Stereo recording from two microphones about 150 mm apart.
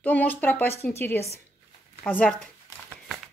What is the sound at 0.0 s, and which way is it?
A woman's voice, 10° left (ahead or behind).